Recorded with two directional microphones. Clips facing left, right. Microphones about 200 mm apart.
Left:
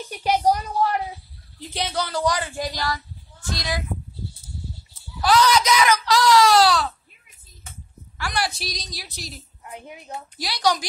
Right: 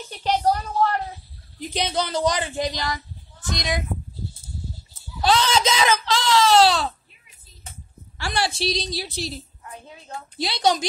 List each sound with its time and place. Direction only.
0.1 s a sound: 10° left (ahead or behind)
1.6 s speech: 20° right (ahead or behind)
5.2 s speech: 25° right (ahead or behind)
8.2 s speech: 30° right (ahead or behind)
9.6 s speech: 20° left (ahead or behind)
10.3 s speech: 25° right (ahead or behind)